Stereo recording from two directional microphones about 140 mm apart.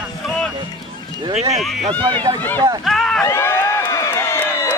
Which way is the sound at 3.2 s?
15° left (ahead or behind).